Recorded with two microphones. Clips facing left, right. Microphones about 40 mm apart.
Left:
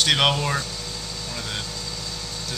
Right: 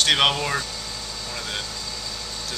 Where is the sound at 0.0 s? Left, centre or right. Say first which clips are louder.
Even; centre.